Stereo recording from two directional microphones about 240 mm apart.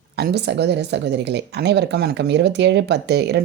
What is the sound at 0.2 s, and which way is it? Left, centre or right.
Speech, right.